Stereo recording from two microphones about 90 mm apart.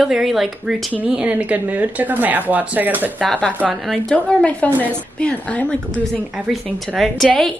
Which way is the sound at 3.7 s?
Centre (ahead or behind).